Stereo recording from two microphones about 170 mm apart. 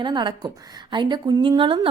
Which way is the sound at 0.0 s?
25° right (ahead or behind).